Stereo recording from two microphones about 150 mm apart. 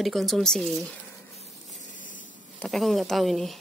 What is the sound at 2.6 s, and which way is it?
Speech, centre (ahead or behind).